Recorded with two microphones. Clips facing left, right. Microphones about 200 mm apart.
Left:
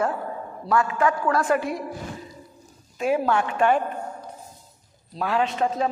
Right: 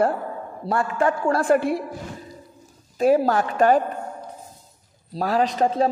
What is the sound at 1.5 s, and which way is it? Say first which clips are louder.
Speech: right 4 dB; 55° right (ahead or behind).